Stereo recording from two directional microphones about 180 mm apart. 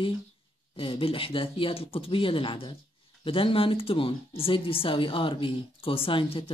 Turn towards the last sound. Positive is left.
turn(degrees=30)  # may be behind; listen again after turning